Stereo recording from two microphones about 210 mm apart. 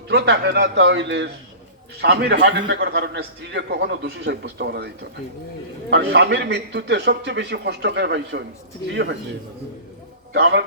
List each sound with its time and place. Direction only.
0.1 s a man's voice: 50° right (ahead or behind)
5.9 s a man's voice: 55° right (ahead or behind)
10.3 s a man's voice: 55° right (ahead or behind)